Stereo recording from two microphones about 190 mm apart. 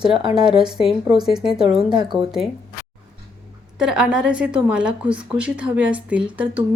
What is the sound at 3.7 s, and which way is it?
A woman's voice, 5° right (ahead or behind).